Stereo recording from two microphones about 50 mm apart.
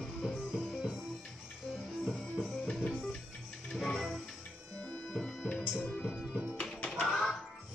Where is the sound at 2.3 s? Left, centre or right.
Centre.